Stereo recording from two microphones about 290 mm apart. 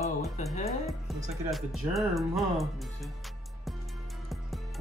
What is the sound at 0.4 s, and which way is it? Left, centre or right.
Speech, left.